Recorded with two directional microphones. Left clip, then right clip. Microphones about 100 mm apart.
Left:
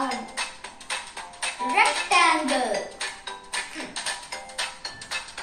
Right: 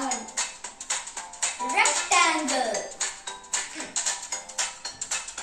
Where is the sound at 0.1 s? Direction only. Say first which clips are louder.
Left 1 dB; 50° right (ahead or behind).